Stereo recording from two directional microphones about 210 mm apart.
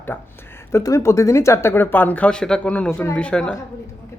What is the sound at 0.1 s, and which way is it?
A woman's voice, 10° left (ahead or behind).